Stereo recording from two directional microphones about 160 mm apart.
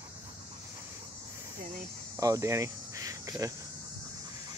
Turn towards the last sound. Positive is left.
turn(degrees=-20)  # may be behind; listen again after turning